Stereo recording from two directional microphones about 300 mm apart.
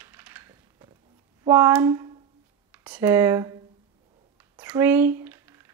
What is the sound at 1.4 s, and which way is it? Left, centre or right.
Speech, centre.